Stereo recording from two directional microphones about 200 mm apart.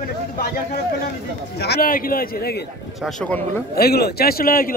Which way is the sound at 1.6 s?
50° left (ahead or behind).